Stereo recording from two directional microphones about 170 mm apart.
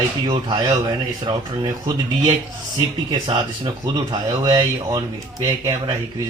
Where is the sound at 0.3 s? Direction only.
25° right (ahead or behind).